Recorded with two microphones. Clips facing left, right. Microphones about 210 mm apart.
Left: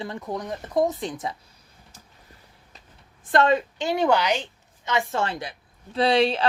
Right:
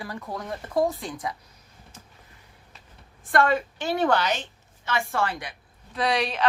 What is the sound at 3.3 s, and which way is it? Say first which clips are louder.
A woman's voice: left 2 dB; 20° left (ahead or behind).